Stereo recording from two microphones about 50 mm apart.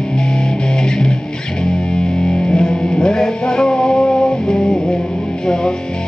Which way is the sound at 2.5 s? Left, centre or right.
Centre.